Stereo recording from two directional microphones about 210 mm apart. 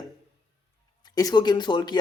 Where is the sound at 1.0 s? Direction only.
20° left (ahead or behind).